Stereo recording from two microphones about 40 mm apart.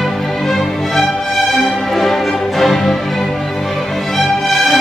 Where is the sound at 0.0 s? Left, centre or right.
Centre.